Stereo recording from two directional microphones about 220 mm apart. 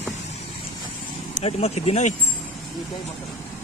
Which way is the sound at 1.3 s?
30° left (ahead or behind).